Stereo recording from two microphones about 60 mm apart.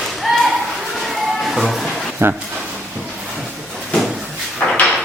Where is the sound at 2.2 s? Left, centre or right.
Right.